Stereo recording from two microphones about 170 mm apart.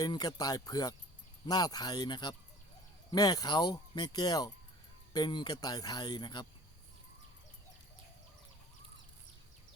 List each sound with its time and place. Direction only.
0.0 s speech: 25° left (ahead or behind)